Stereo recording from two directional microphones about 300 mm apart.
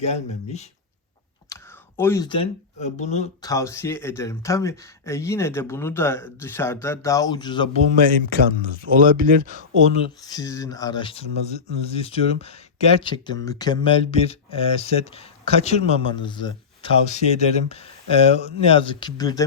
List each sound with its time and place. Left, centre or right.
0.0 s speech: left
1.5 s computer keyboard: centre
2.0 s speech: centre
3.5 s speech: centre
7.9 s speech: right
9.9 s speech: centre